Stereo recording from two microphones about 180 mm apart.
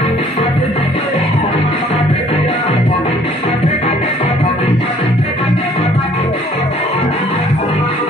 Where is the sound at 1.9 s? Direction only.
35° left (ahead or behind).